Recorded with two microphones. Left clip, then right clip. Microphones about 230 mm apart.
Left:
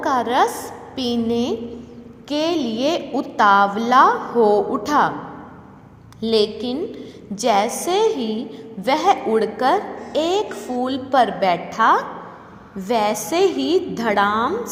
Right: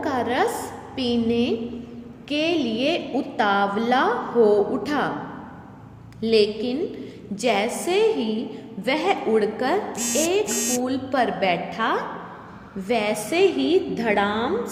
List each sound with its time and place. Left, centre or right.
0.0 s a sound: centre
0.4 s a woman's voice: centre
0.9 s a woman's voice: left
6.1 s a woman's voice: left